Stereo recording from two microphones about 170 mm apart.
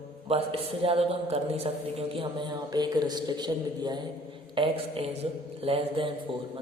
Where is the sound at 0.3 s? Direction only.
35° right (ahead or behind).